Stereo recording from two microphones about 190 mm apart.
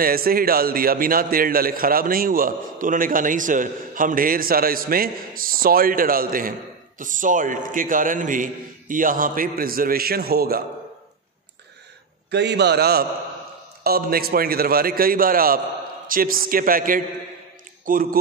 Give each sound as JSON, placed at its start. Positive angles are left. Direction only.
{"t": 0.0, "sound": "a man's voice", "side_deg": -50}
{"t": 12.3, "sound": "a man's voice", "side_deg": -65}